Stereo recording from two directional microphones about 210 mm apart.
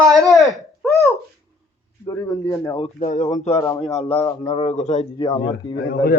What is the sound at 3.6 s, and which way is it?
Speech, 15° left (ahead or behind).